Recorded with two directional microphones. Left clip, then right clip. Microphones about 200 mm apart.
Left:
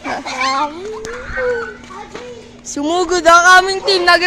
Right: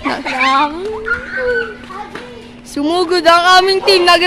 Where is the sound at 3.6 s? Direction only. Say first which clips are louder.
Right 3 dB; 10° right (ahead or behind).